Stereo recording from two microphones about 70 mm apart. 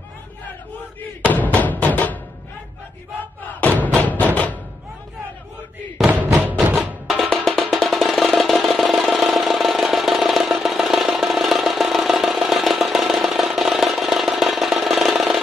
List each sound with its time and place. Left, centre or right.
1.3 s a sound: left
3.6 s music: left
6.0 s music: right
7.1 s music: centre